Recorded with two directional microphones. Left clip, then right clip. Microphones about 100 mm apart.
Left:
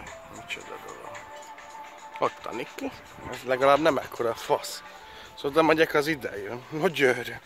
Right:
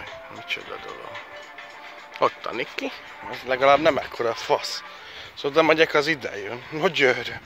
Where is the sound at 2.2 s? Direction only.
10° left (ahead or behind).